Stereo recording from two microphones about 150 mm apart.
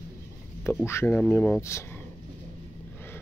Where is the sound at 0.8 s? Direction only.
15° left (ahead or behind).